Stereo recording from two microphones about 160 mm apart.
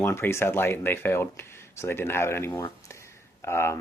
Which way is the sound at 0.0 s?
15° left (ahead or behind).